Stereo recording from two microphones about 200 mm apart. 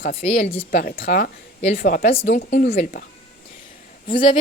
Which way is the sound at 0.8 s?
45° left (ahead or behind).